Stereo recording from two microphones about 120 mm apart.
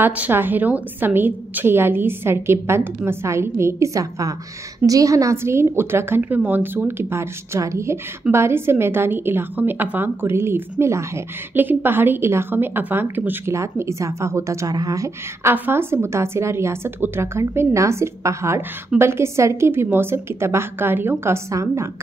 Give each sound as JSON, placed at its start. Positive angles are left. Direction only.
{"t": 0.0, "sound": "a woman's voice", "side_deg": -15}
{"t": 15.5, "sound": "a woman's voice", "side_deg": -15}